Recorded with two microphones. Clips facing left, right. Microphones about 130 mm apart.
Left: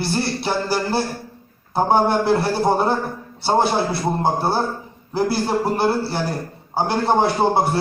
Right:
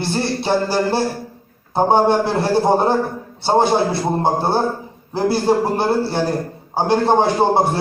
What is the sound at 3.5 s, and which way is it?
A man's voice, 20° right (ahead or behind).